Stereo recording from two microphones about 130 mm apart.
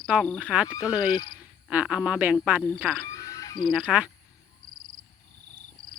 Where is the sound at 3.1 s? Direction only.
25° left (ahead or behind).